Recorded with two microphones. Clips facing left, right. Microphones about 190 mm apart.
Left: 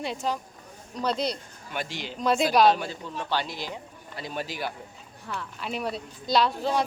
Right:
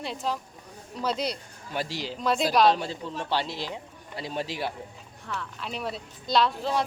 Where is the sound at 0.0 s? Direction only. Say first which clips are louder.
Left 1 dB; centre (ahead or behind).